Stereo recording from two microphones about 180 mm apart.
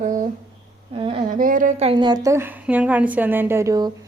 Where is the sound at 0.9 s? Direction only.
30° right (ahead or behind).